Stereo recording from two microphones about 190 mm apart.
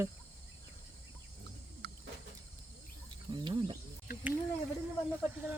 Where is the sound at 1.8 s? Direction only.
60° right (ahead or behind).